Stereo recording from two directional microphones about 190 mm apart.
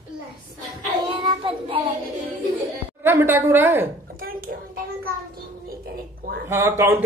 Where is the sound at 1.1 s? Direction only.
25° right (ahead or behind).